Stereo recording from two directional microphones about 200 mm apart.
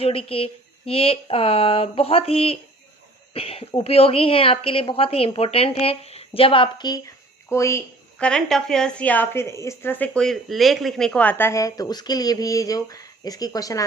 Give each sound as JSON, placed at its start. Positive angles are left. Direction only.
{"t": 0.0, "sound": "a woman's voice", "side_deg": 30}